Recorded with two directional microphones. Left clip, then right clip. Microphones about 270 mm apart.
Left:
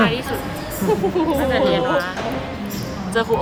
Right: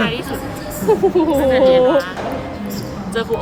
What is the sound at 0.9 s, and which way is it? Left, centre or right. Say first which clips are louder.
Speech: right 5 dB; centre.